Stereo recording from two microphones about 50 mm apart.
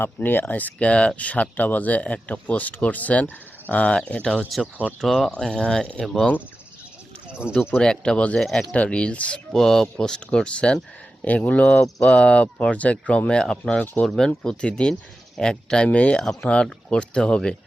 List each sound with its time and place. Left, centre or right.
0.0 s speech: left
4.5 s speech: centre
7.3 s a sound: right
7.8 s speech: centre
8.7 s speech: left
9.5 s speech: centre
12.1 s speech: left
16.2 s speech: centre
16.5 s speech: left